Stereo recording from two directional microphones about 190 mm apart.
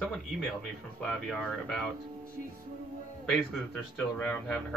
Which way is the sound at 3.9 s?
5° left (ahead or behind).